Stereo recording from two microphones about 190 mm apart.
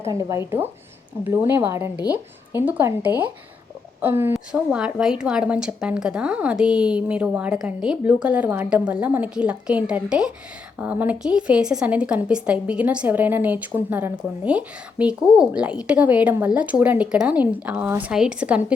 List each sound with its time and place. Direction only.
0.0 s a woman's voice: 15° right (ahead or behind)